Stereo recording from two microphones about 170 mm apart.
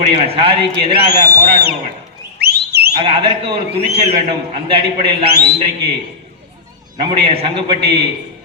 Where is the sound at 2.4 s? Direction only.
70° right (ahead or behind).